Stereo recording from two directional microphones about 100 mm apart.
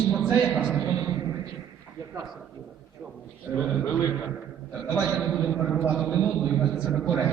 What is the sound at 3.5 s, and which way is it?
Speech, 5° left (ahead or behind).